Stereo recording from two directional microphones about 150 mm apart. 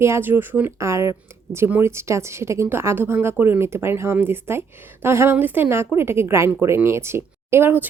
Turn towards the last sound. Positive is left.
turn(degrees=-15)  # may be behind; listen again after turning